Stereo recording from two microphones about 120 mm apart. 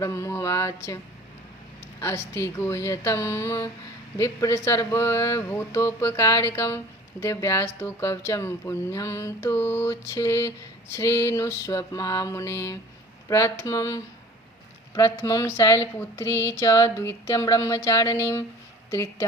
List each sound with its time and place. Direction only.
0.0 s speech: 25° left (ahead or behind)
2.0 s speech: 20° left (ahead or behind)